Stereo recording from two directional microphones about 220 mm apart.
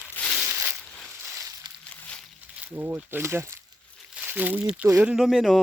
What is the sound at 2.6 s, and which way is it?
Speech, 10° right (ahead or behind).